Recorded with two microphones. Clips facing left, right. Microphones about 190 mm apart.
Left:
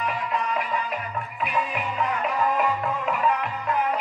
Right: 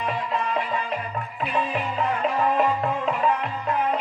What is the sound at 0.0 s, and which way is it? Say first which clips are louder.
Music: right 1 dB; 25° right (ahead or behind).